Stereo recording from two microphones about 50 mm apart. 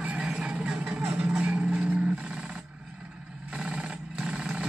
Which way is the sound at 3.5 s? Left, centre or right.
Right.